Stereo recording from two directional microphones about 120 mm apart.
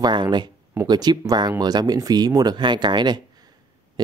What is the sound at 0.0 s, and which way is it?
Speech, 40° right (ahead or behind).